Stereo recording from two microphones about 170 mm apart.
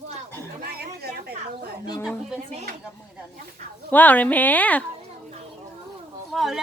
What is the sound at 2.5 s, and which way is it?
Speech, 40° right (ahead or behind).